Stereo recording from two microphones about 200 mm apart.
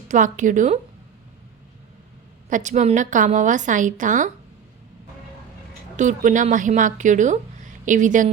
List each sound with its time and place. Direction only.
0.1 s a woman's voice: 40° right (ahead or behind)
2.5 s a woman's voice: 40° right (ahead or behind)
6.0 s a woman's voice: 40° right (ahead or behind)